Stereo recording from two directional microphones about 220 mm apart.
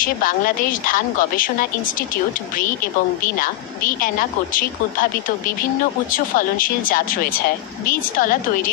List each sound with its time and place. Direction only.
0.0 s speech: 40° left (ahead or behind)
3.3 s speech: 40° left (ahead or behind)
6.1 s speech: 40° left (ahead or behind)